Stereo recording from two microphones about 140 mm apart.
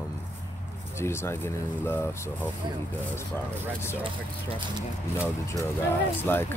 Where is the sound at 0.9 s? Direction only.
20° left (ahead or behind).